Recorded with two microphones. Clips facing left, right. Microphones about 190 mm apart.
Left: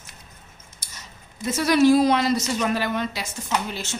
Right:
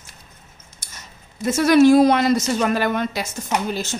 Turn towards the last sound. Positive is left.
turn(degrees=-40)  # may be behind; listen again after turning